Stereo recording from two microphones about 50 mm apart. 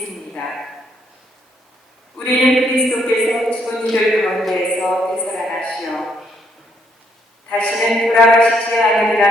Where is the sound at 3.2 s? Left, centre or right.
Centre.